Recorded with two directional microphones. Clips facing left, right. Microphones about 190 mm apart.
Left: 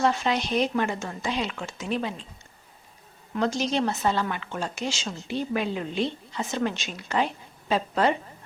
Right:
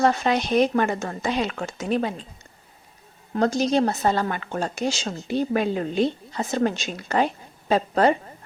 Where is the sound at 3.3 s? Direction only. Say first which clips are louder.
Right 5 dB; 40° right (ahead or behind).